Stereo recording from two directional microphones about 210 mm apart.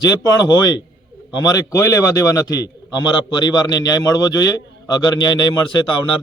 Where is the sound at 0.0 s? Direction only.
20° left (ahead or behind).